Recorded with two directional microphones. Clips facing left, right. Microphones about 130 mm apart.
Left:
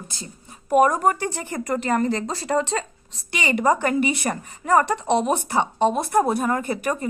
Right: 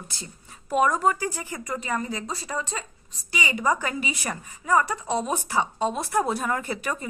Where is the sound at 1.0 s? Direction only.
60° left (ahead or behind).